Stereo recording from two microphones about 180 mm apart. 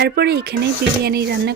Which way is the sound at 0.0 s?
65° right (ahead or behind).